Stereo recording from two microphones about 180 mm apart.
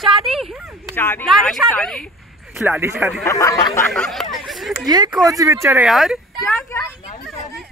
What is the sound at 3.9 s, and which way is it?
Speech, centre (ahead or behind).